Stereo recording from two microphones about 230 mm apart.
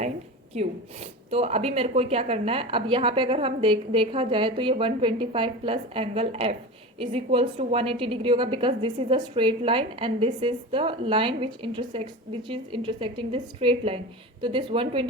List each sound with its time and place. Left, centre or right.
0.5 s a woman's voice: right